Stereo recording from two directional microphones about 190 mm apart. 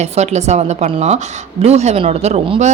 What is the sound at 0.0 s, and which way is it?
A man's voice, 35° right (ahead or behind).